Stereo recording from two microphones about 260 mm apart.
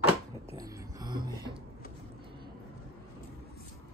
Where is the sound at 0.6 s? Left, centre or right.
Centre.